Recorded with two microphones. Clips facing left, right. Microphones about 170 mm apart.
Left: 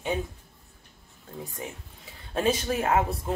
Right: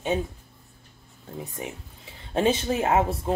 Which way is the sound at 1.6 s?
20° right (ahead or behind).